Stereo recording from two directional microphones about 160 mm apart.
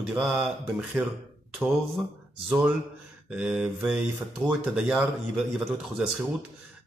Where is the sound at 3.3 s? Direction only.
5° right (ahead or behind).